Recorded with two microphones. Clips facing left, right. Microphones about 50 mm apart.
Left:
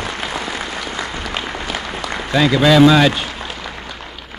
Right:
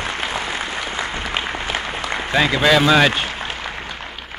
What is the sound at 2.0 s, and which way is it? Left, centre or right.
A man's voice, right.